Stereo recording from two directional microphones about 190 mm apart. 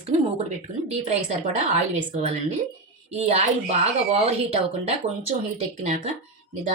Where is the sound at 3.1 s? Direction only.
35° right (ahead or behind).